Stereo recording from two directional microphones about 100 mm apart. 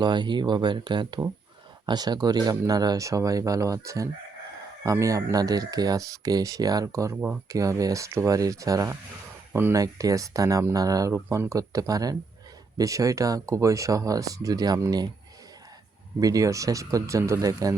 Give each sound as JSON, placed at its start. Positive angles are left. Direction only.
{"t": 0.0, "sound": "speech", "side_deg": -50}
{"t": 9.5, "sound": "speech", "side_deg": -20}
{"t": 9.7, "sound": "speech", "side_deg": -35}
{"t": 16.2, "sound": "speech", "side_deg": -35}